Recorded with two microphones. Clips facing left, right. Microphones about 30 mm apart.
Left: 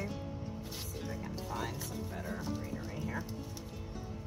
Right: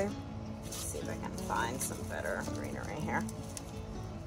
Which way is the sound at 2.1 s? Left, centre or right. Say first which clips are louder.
Right 5 dB; right.